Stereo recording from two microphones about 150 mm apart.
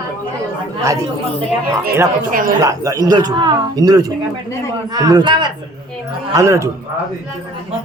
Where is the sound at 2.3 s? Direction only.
65° right (ahead or behind).